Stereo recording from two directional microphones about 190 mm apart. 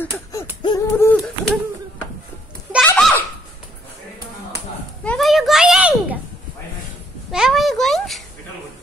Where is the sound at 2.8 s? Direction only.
5° left (ahead or behind).